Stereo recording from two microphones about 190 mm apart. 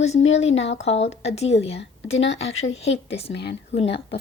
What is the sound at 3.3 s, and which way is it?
Speech, 65° left (ahead or behind).